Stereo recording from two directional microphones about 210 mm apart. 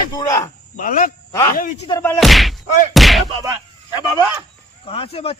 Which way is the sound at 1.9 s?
15° left (ahead or behind).